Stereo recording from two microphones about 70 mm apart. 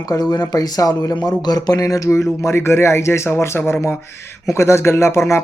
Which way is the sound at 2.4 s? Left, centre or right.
Left.